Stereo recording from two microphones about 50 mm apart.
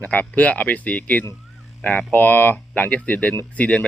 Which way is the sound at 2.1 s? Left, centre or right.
Left.